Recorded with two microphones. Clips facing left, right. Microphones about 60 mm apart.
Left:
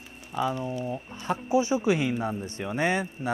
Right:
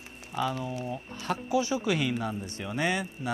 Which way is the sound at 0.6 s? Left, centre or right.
Left.